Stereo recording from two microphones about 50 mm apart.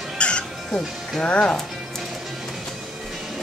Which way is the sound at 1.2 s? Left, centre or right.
Centre.